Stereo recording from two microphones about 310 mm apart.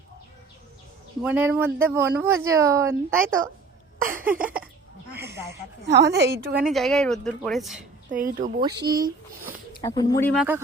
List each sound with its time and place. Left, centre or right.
1.2 s speech: centre
4.1 s cough: centre
5.8 s a woman's voice: right
6.6 s a woman's voice: centre
8.1 s speech: right
8.8 s speech: centre
9.8 s speech: centre